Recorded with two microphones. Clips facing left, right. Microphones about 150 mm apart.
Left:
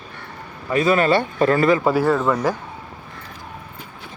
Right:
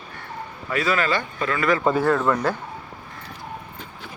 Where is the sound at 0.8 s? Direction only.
30° left (ahead or behind).